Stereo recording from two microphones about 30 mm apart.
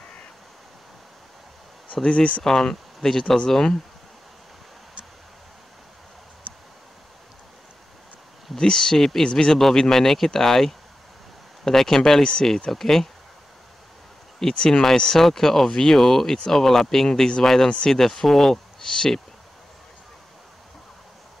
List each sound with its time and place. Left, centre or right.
2.0 s speech: left
2.4 s speech: centre
8.5 s speech: left
8.9 s speech: centre
9.2 s speech: left
9.5 s speech: centre
14.7 s speech: centre
17.6 s speech: left
17.9 s speech: centre
18.5 s speech: centre